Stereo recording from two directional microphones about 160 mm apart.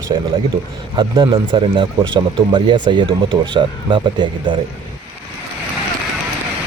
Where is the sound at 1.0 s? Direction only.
30° right (ahead or behind).